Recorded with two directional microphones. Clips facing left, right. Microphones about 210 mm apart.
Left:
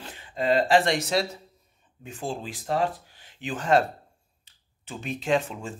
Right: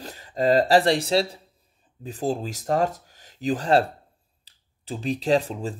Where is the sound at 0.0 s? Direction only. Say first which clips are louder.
Right 5 dB; 40° right (ahead or behind).